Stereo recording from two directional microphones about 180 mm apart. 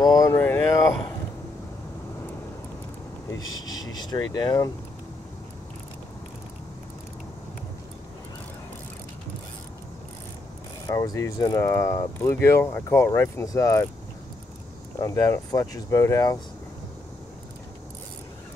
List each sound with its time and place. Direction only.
0.0 s a sound: 20° left (ahead or behind)
3.3 s speech: 20° left (ahead or behind)
10.9 s speech: 20° left (ahead or behind)
15.0 s speech: 20° left (ahead or behind)